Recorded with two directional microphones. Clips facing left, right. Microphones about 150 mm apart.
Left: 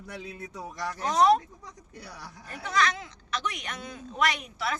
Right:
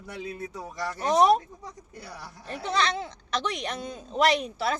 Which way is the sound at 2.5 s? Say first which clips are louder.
Right 1 dB; 30° right (ahead or behind).